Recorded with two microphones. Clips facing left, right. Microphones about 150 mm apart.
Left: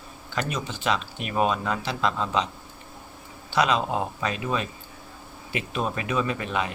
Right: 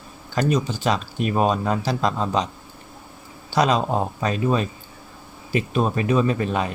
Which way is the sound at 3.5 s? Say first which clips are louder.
Right 4 dB; 40° right (ahead or behind).